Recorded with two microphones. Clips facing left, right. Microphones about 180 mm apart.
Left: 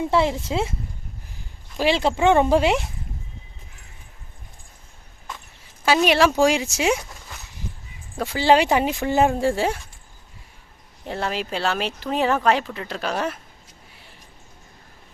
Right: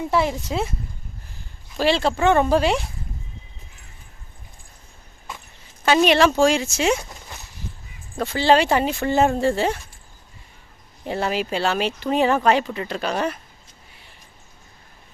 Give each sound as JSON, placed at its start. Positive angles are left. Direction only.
{"t": 0.1, "sound": "speech", "side_deg": 25}
{"t": 1.8, "sound": "speech", "side_deg": 15}
{"t": 5.8, "sound": "speech", "side_deg": 5}
{"t": 8.1, "sound": "speech", "side_deg": 10}
{"t": 11.0, "sound": "speech", "side_deg": -5}